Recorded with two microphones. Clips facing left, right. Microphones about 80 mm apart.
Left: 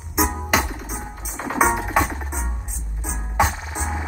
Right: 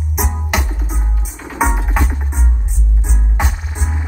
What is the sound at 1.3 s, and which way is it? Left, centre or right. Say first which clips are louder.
Music: left 3 dB; left.